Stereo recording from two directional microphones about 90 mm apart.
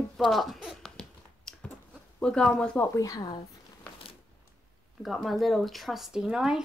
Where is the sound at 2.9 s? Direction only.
40° left (ahead or behind).